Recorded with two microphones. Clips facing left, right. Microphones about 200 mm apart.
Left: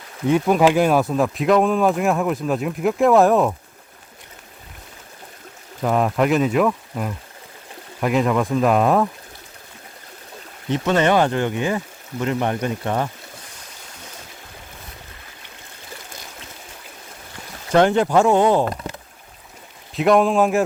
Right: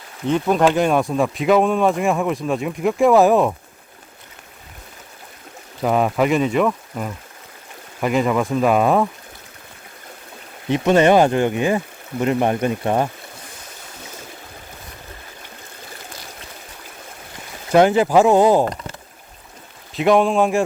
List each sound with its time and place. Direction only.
0.3 s speech: 10° left (ahead or behind)
5.8 s speech: 5° right (ahead or behind)
10.7 s speech: 15° right (ahead or behind)
17.7 s speech: 5° right (ahead or behind)
19.9 s speech: centre (ahead or behind)